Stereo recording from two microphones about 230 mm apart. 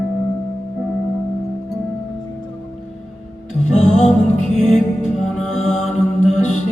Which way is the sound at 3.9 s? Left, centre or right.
Left.